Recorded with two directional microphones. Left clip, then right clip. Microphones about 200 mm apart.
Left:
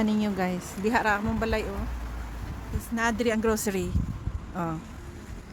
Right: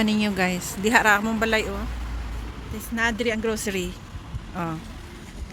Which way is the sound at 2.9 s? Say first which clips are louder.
Right 2 dB; 20° left (ahead or behind).